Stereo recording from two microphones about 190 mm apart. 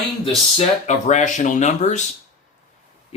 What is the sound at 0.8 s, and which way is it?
Speech, 40° left (ahead or behind).